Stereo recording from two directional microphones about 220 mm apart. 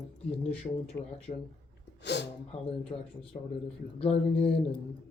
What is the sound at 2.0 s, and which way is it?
Speech, 50° left (ahead or behind).